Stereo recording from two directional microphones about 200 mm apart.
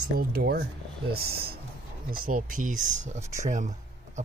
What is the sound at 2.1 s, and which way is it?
Speech, 45° right (ahead or behind).